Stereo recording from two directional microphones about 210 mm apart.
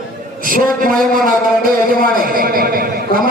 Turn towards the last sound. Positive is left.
turn(degrees=-45)  # may be behind; listen again after turning